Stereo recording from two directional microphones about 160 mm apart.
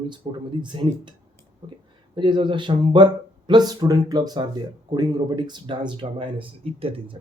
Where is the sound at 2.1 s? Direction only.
30° right (ahead or behind).